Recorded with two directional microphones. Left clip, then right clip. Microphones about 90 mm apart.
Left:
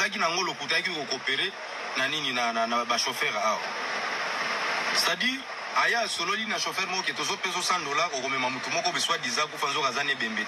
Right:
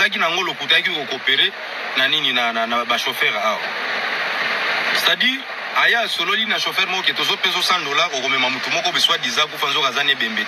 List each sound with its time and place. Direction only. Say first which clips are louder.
0.0 s speech: right 8 dB; 20° right (ahead or behind)
4.4 s a sound: right 9 dB; 20° right (ahead or behind)
5.8 s speech: right 9 dB; 20° right (ahead or behind)